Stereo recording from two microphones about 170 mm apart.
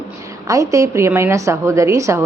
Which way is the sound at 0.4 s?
20° right (ahead or behind).